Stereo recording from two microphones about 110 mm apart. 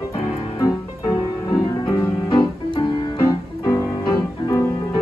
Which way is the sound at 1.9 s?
40° left (ahead or behind).